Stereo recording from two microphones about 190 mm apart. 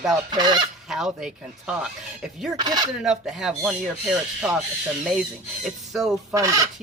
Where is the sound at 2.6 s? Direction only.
20° right (ahead or behind).